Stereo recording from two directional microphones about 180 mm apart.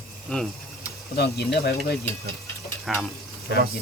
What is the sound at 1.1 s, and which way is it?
Speech, 65° left (ahead or behind).